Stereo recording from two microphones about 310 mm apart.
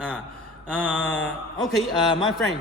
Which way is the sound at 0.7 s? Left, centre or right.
Centre.